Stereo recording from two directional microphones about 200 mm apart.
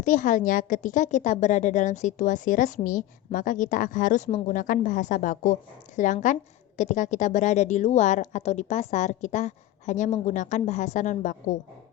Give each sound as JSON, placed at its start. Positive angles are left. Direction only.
{"t": 0.0, "sound": "a woman's voice", "side_deg": 40}